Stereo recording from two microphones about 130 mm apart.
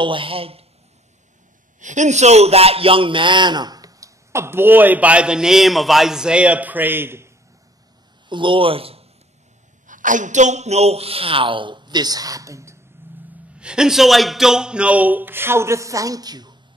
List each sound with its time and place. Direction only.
0.0 s a woman's voice: 40° right (ahead or behind)
1.8 s a man's voice: 70° right (ahead or behind); by 7.2 s 15° right (ahead or behind)
8.3 s a woman's voice: 40° right (ahead or behind)
9.8 s a woman's voice: 80° right; by 12.7 s 25° right (ahead or behind)
13.6 s a man's voice: 5° right (ahead or behind); by 16.5 s 30° right (ahead or behind)